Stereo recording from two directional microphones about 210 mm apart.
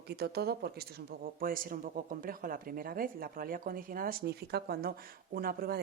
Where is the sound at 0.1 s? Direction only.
50° right (ahead or behind).